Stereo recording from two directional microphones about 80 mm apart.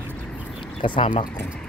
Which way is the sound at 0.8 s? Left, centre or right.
Left.